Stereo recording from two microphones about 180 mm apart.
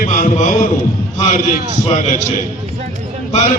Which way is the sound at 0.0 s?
45° left (ahead or behind).